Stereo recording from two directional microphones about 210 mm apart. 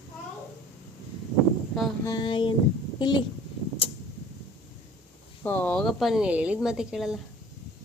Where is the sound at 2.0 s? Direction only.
20° left (ahead or behind).